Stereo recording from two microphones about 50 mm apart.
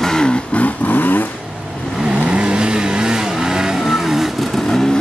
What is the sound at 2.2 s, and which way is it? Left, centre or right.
Vehicle, right.